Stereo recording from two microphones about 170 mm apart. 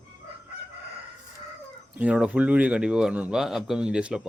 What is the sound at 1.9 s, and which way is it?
A man's voice, 10° right (ahead or behind).